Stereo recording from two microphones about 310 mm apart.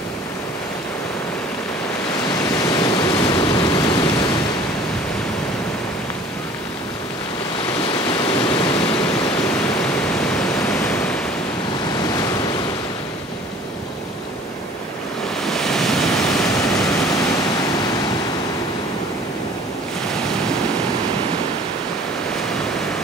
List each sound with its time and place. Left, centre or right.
2.7 s pink noise: centre
8.1 s waterfall: centre
10.2 s pink noise: centre
15.4 s waves: centre